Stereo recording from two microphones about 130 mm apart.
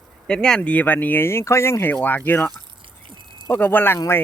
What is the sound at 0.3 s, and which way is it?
Speech, 5° left (ahead or behind).